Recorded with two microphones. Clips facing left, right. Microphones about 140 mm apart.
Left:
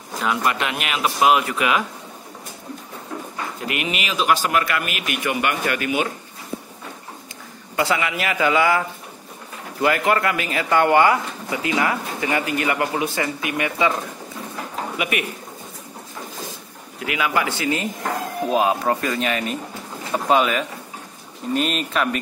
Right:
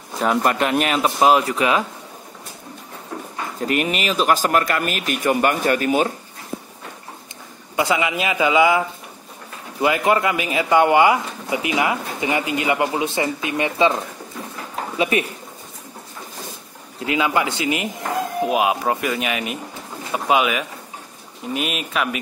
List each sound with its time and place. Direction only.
0.2 s speech: 40° right (ahead or behind)
3.6 s speech: 40° right (ahead or behind)
7.7 s a man's voice: 20° right (ahead or behind)
15.0 s speech: 30° right (ahead or behind)
17.0 s a man's voice: 25° right (ahead or behind); by 22.2 s 5° right (ahead or behind)